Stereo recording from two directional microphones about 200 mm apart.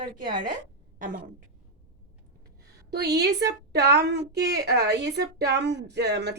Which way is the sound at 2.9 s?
55° right (ahead or behind).